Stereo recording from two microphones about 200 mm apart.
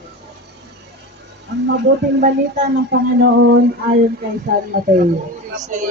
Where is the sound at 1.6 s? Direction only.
60° right (ahead or behind).